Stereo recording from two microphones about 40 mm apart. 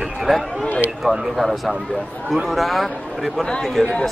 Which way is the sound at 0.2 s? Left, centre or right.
Centre.